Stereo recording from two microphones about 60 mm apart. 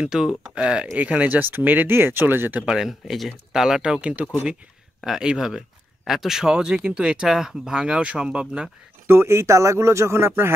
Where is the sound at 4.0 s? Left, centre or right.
Right.